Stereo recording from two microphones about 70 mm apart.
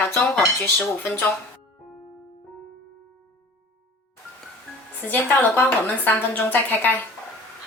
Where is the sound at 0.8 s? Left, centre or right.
Left.